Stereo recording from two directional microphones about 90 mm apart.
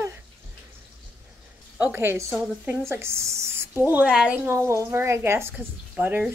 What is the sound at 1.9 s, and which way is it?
Speech, 25° right (ahead or behind).